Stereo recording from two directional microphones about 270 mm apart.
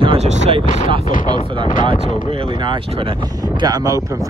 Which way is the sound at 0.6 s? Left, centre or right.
Left.